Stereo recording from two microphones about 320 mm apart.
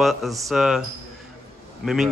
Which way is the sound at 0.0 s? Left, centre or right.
Centre.